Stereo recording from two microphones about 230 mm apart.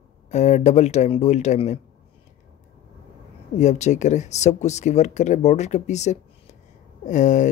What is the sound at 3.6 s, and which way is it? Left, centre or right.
Speech, left.